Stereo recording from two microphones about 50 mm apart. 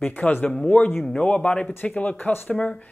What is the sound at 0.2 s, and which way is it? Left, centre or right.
Speech, left.